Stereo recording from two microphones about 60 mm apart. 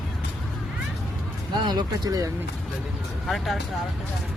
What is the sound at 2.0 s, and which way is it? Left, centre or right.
Speech, right.